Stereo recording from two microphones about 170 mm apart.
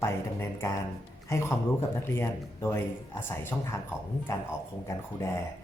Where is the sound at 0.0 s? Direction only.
15° left (ahead or behind).